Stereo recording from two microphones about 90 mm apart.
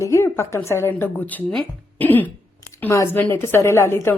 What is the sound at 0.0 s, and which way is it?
A woman's voice, 30° left (ahead or behind).